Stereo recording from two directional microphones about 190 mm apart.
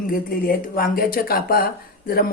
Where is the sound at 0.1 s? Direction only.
50° left (ahead or behind).